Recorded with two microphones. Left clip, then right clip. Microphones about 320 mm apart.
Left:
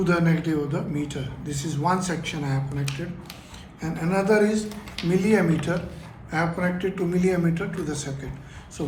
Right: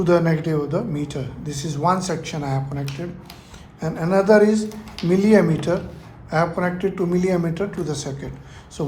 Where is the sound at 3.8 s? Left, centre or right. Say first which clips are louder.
Right 6 dB; centre.